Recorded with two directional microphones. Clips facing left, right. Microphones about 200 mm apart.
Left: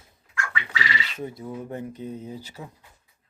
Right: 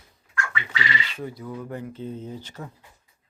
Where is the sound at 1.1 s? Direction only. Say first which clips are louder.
Even; 25° left (ahead or behind).